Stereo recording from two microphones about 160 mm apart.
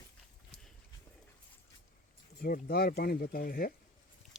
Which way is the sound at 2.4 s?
70° left (ahead or behind).